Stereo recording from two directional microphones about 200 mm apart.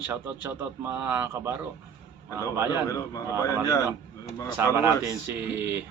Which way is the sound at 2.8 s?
15° left (ahead or behind).